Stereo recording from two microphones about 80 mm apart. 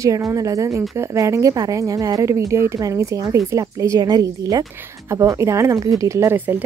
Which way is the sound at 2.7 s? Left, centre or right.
Right.